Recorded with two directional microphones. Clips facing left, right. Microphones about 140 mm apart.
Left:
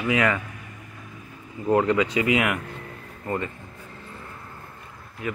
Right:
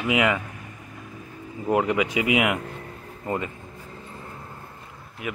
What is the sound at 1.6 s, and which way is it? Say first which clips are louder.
Speech: left 2 dB; 15° right (ahead or behind).